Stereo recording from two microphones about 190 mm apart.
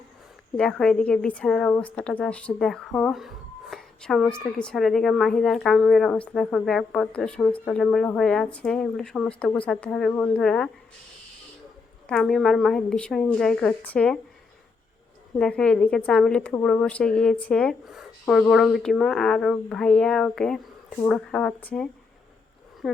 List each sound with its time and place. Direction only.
0.5 s a woman's voice: 5° left (ahead or behind)
12.0 s a woman's voice: centre (ahead or behind)
15.4 s a woman's voice: 5° left (ahead or behind)